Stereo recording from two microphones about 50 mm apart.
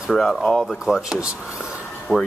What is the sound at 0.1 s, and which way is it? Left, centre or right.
Speech, centre.